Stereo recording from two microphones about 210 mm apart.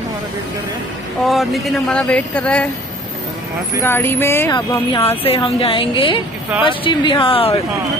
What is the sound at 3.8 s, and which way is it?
Speech, 10° left (ahead or behind).